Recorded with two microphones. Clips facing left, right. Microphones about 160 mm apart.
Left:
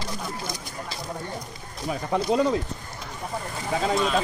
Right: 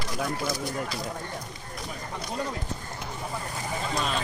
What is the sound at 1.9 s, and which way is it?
Speech, 90° left.